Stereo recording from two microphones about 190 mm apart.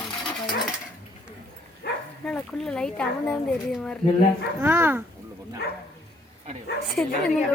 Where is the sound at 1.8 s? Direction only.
60° left (ahead or behind).